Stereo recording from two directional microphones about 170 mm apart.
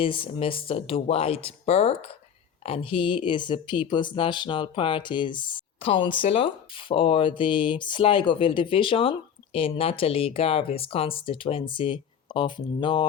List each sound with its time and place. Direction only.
0.0 s speech: 30° left (ahead or behind)